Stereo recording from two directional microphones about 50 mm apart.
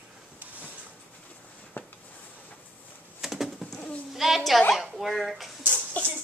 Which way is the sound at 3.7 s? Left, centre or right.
Left.